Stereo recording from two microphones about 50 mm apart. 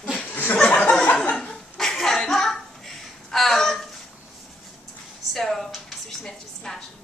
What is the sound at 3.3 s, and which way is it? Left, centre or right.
Speech, centre.